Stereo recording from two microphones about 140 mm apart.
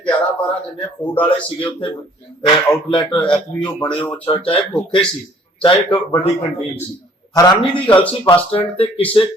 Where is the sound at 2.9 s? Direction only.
35° left (ahead or behind).